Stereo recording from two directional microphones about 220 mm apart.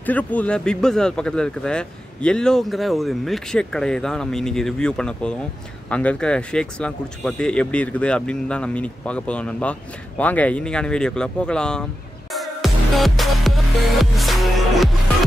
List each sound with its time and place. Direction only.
0.0 s speech: 5° left (ahead or behind)